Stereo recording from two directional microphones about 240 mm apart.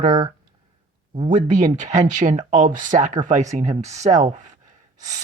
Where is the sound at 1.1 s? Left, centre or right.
Right.